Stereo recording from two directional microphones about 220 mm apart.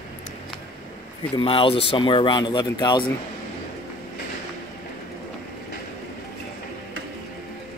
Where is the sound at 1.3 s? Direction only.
25° left (ahead or behind).